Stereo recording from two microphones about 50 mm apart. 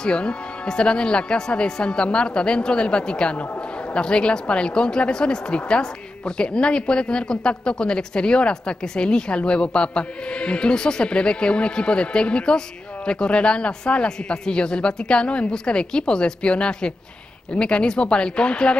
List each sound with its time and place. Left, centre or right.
0.0 s speech: centre